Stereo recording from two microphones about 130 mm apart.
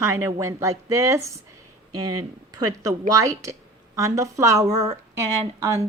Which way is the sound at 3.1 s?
25° right (ahead or behind).